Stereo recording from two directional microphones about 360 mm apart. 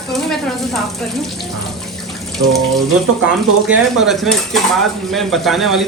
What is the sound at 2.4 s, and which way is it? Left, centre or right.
Water tap, right.